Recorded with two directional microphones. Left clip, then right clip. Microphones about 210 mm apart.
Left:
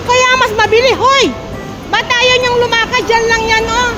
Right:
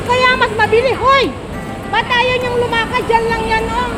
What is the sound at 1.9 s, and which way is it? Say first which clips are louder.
Speech: left 4 dB; 40° left (ahead or behind).